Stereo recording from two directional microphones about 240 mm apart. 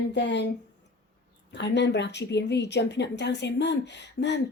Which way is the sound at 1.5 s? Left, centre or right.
Left.